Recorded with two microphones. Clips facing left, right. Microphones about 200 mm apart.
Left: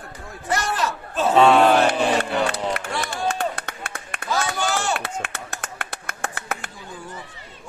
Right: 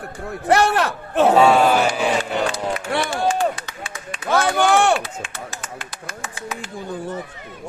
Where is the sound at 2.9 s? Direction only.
60° right (ahead or behind).